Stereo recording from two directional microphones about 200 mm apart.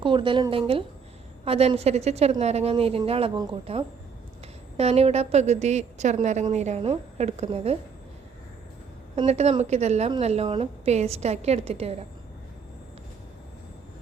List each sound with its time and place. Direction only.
0.0 s a woman's voice: 25° right (ahead or behind)
9.1 s a woman's voice: 35° right (ahead or behind)